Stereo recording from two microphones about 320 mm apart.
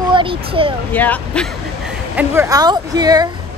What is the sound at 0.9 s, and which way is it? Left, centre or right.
Speech, centre.